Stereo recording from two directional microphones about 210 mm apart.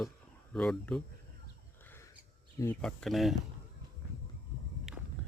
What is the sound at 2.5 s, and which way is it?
Speech, 15° left (ahead or behind).